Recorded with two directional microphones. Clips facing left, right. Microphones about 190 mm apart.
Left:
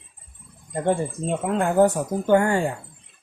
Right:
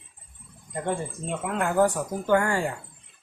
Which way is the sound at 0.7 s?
30° left (ahead or behind).